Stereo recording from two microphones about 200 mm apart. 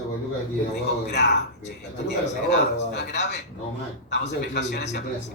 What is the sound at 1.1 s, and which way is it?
A man's voice, 55° left (ahead or behind).